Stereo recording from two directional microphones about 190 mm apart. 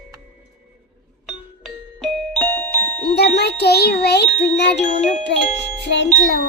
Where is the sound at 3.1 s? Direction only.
60° left (ahead or behind).